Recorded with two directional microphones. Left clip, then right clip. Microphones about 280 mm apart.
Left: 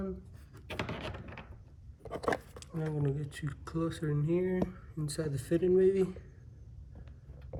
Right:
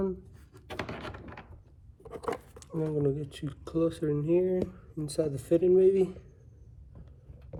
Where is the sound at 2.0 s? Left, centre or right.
Centre.